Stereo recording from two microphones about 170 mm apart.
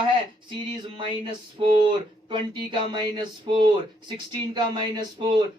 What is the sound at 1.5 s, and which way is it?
Speech, 30° right (ahead or behind).